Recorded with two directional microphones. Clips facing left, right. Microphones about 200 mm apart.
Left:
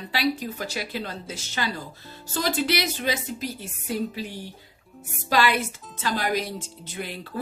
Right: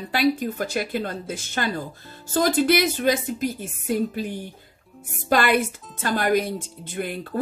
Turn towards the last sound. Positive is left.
turn(degrees=-50)  # may be behind; listen again after turning